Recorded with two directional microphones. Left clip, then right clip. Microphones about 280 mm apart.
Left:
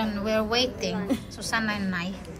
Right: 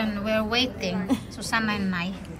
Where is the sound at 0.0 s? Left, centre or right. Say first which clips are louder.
Even; centre.